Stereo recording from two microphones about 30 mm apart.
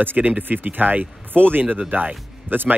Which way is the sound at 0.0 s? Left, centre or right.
Right.